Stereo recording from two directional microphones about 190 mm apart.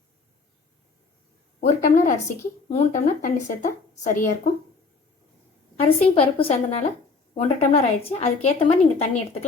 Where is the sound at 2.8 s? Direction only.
40° left (ahead or behind).